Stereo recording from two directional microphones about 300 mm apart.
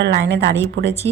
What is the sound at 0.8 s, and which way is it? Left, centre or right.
Speech, centre.